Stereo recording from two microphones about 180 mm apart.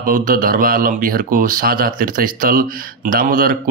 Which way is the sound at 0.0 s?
50° right (ahead or behind).